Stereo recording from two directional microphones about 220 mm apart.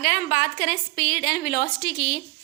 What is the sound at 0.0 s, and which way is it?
A woman's voice, 40° left (ahead or behind).